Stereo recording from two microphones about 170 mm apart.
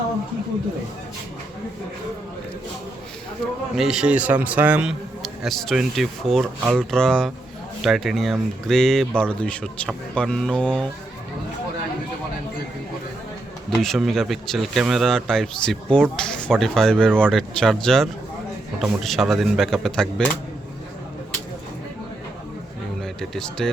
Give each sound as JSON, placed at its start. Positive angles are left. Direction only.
{"t": 3.8, "sound": "a man's voice", "side_deg": -5}
{"t": 13.7, "sound": "a man's voice", "side_deg": 0}
{"t": 23.0, "sound": "a sound", "side_deg": 0}